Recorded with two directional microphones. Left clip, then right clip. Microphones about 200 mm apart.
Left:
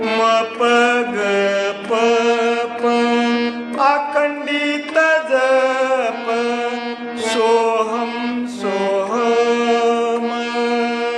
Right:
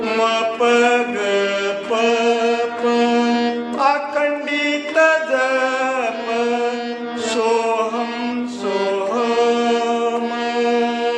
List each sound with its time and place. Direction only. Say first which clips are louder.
0.0 s music: left 2 dB; 10° left (ahead or behind)
3.8 s mantra: left 3 dB; 15° left (ahead or behind)
7.3 s music: left 3 dB; 15° left (ahead or behind)
8.6 s mantra: left 1 dB; 10° left (ahead or behind)